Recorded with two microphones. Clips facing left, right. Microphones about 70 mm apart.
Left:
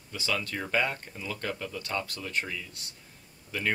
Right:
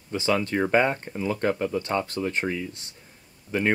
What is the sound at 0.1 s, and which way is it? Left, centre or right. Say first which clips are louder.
Speech: right 8 dB; right.